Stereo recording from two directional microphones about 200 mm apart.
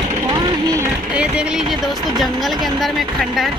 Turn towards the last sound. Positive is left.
turn(degrees=0)  # may be behind; listen again after turning